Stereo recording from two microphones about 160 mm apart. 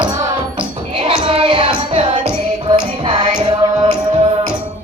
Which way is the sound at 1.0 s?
35° right (ahead or behind).